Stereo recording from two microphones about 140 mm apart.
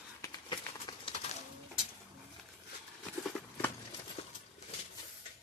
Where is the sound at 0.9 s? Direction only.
30° left (ahead or behind).